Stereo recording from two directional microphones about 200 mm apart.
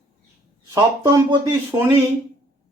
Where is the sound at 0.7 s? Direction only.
20° right (ahead or behind).